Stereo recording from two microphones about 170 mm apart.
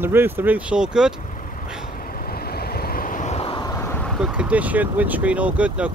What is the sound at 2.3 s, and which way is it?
Vehicle, 65° left (ahead or behind).